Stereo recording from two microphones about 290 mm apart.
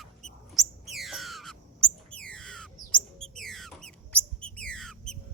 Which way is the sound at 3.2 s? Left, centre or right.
Centre.